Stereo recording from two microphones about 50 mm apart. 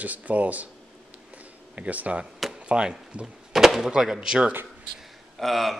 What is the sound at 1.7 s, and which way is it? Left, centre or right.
Speech, right.